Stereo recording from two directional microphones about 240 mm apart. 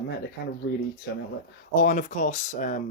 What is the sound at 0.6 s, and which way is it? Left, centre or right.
Speech, left.